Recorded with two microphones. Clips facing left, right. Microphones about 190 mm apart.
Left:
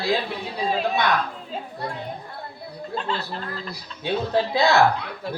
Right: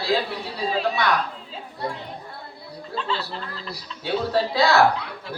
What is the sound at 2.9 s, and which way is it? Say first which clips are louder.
Speech: even; 50° left (ahead or behind).